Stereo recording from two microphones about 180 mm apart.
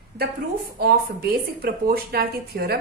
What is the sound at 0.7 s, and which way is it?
A woman's voice, 60° right (ahead or behind).